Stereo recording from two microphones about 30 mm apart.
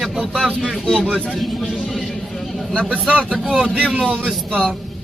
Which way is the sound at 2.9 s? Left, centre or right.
Right.